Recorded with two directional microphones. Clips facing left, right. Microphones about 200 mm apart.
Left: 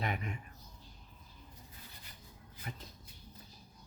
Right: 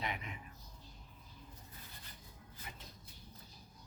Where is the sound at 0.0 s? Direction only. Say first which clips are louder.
Left 5 dB; 45° left (ahead or behind).